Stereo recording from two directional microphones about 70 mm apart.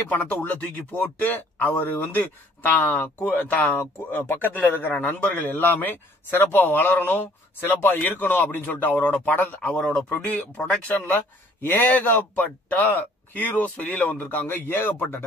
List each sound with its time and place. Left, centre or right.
0.1 s a man's voice: left
9.6 s a man's voice: centre
11.6 s a man's voice: left